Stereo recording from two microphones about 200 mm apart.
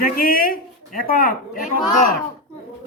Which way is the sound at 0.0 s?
45° left (ahead or behind).